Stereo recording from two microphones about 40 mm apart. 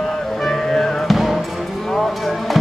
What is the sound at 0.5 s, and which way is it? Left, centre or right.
Music, centre.